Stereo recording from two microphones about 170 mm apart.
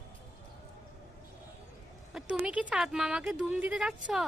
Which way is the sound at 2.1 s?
5° right (ahead or behind).